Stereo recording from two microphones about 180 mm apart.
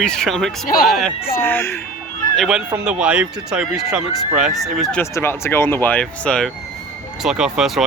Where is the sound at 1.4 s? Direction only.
15° left (ahead or behind).